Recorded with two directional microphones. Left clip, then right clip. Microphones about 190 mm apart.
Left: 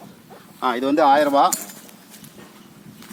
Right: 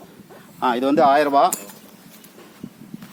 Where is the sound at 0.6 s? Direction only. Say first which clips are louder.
Right 1 dB; 50° right (ahead or behind).